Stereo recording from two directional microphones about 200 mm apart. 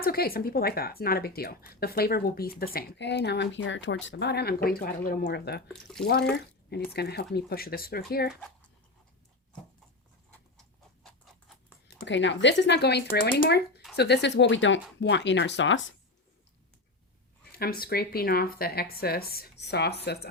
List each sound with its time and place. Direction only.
0.0 s a woman's voice: 50° left (ahead or behind)
5.6 s speech: centre (ahead or behind)
6.3 s a woman's voice: 55° left (ahead or behind)
8.3 s speech: centre (ahead or behind)
11.9 s speech: 65° left (ahead or behind)
17.5 s a woman's voice: 50° left (ahead or behind)